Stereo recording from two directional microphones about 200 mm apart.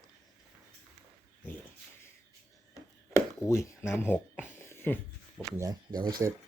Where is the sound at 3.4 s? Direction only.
15° left (ahead or behind).